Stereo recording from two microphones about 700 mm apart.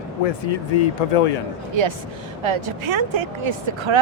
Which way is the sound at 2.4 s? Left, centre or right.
Right.